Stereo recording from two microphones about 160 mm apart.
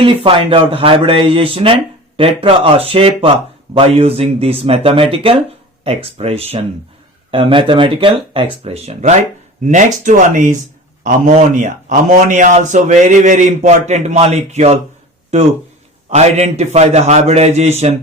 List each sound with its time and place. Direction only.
0.0 s a man's voice: 35° right (ahead or behind)
16.0 s a man's voice: 45° right (ahead or behind)